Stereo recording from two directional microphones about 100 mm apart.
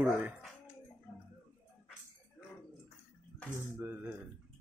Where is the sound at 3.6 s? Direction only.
20° right (ahead or behind).